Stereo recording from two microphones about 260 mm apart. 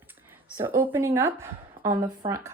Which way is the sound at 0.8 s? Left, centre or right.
Centre.